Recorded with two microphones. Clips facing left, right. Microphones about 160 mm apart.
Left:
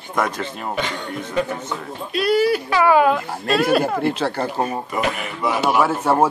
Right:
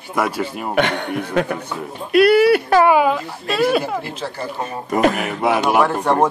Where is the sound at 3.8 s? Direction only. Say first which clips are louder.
Left 5 dB; 60° left (ahead or behind).